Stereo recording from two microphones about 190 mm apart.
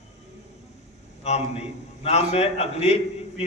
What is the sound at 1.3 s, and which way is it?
A man's voice, 35° left (ahead or behind).